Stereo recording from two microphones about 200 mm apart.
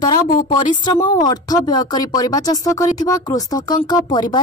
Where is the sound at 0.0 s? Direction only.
20° left (ahead or behind).